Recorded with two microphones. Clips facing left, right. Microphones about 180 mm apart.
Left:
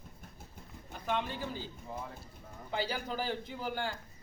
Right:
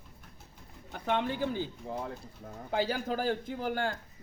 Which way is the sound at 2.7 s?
50° right (ahead or behind).